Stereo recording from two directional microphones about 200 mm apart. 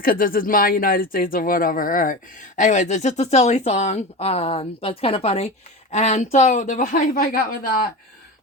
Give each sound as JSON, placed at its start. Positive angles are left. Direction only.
{"t": 0.0, "sound": "speech", "side_deg": 45}